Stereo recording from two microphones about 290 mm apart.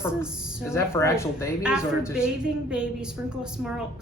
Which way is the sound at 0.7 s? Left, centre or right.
Centre.